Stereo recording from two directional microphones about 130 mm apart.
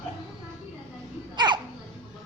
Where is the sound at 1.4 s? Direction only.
35° right (ahead or behind).